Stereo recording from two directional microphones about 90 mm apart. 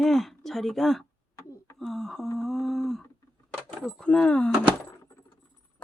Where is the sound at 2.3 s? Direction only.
5° left (ahead or behind).